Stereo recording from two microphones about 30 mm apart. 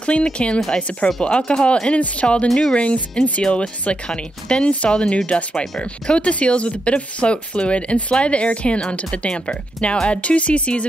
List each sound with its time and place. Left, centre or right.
0.0 s speech: left
2.4 s speech: centre
2.7 s speech: left
10.0 s speech: left